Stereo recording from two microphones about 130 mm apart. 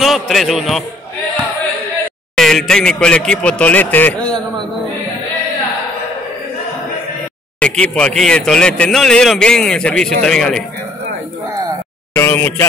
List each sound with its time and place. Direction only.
0.0 s a man's voice: centre (ahead or behind)
2.3 s a man's voice: 5° left (ahead or behind)
7.6 s a man's voice: 10° left (ahead or behind)
12.1 s speech: 15° left (ahead or behind)